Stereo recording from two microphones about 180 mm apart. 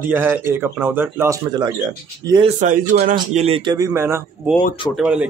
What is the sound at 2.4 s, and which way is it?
Speech, 45° right (ahead or behind).